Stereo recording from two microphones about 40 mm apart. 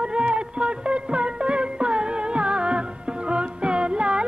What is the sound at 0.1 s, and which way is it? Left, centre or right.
Music, right.